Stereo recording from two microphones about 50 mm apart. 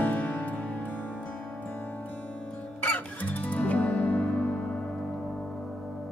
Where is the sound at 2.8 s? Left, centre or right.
Left.